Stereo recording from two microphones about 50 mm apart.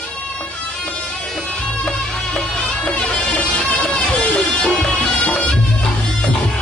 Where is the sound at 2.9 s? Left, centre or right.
Centre.